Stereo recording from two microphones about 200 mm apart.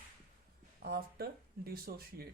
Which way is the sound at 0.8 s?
50° right (ahead or behind).